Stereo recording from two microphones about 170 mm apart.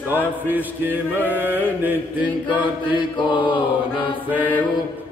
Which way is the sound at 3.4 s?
30° left (ahead or behind).